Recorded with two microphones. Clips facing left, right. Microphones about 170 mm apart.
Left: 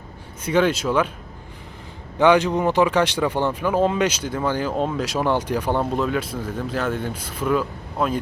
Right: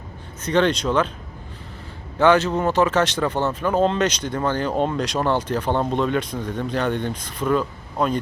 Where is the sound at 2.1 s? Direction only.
15° left (ahead or behind).